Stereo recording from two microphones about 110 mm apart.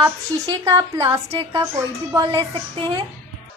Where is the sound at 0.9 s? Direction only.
25° right (ahead or behind).